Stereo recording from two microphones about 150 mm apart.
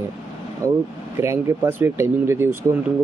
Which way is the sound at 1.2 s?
20° right (ahead or behind).